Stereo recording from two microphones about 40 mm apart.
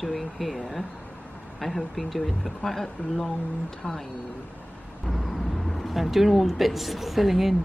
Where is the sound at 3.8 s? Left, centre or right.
Left.